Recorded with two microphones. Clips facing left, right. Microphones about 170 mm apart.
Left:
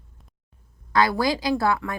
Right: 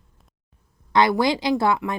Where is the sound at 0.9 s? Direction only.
20° right (ahead or behind).